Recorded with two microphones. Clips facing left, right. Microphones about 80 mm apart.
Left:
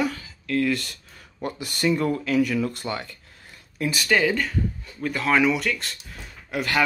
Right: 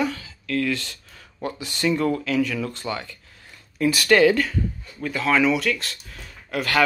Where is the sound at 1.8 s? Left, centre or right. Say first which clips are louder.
Right 1 dB; centre.